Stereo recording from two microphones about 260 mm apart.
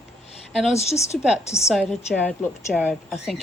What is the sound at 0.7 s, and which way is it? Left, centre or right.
Speech, left.